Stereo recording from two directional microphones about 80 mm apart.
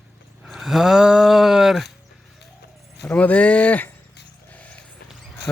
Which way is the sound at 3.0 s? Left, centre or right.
Centre.